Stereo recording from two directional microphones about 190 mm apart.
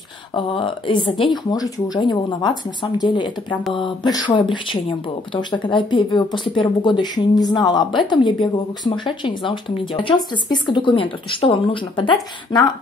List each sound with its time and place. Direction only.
0.3 s speech: 25° left (ahead or behind)